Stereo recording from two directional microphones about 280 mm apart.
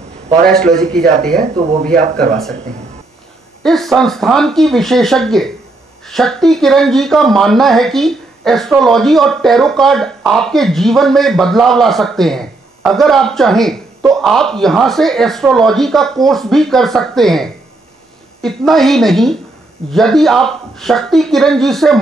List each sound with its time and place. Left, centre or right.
0.5 s speech: centre
1.4 s speech: right
3.6 s speech: centre